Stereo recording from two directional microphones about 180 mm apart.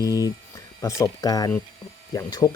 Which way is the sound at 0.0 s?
20° left (ahead or behind).